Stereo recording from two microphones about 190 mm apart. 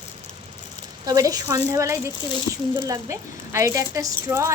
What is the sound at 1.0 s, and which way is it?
A woman's voice, 20° right (ahead or behind).